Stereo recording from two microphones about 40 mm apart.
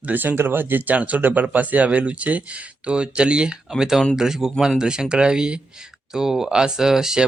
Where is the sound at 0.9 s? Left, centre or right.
Right.